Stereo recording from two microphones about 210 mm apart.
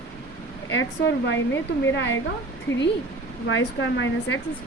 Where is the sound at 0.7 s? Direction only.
60° left (ahead or behind).